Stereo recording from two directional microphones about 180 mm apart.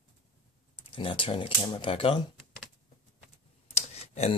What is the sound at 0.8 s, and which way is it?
Speech, 30° left (ahead or behind).